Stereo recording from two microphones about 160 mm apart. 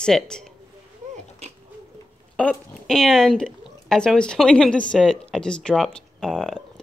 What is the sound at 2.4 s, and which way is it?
Speech, 5° left (ahead or behind).